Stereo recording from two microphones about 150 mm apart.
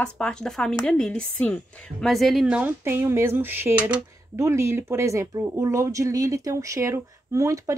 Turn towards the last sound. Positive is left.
turn(degrees=-20)  # may be behind; listen again after turning